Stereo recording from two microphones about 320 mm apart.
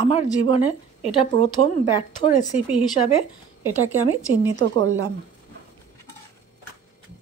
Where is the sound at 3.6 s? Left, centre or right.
Right.